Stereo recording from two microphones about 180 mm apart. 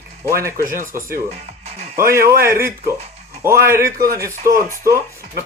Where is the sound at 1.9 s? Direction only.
15° right (ahead or behind).